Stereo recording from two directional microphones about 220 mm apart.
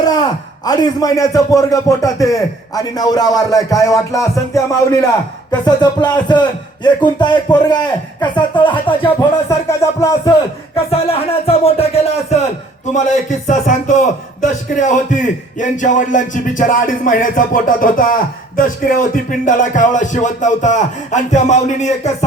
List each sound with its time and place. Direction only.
0.1 s a man's voice: 15° left (ahead or behind)
10.8 s speech: 25° left (ahead or behind)
13.5 s a man's voice: 35° left (ahead or behind)